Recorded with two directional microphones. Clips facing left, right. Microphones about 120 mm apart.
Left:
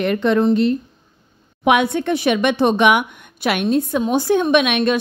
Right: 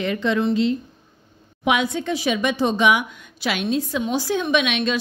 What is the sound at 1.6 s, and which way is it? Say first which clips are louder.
A woman's voice: left 5 dB; 60° left (ahead or behind).